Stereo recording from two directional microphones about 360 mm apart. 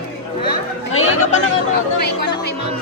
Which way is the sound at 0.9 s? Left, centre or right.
Left.